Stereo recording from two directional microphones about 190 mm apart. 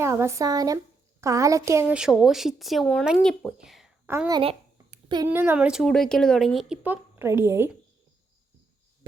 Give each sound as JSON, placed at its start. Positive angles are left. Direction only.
{"t": 0.0, "sound": "a woman's voice", "side_deg": -15}
{"t": 4.3, "sound": "babbling", "side_deg": -30}
{"t": 5.3, "sound": "a woman's voice", "side_deg": -10}